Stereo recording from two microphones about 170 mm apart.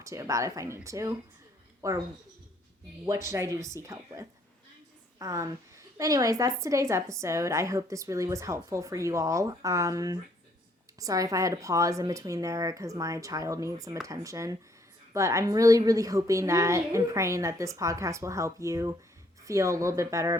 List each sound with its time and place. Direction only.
0.0 s a woman's voice: 20° right (ahead or behind)
3.1 s a woman's voice: 15° right (ahead or behind)